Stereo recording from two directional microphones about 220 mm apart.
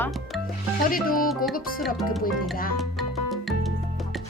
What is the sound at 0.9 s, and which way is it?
Music, 40° left (ahead or behind).